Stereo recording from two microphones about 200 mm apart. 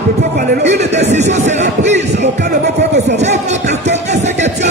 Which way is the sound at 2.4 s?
55° right (ahead or behind).